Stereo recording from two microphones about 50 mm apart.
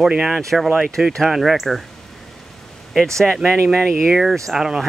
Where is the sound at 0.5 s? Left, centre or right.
Centre.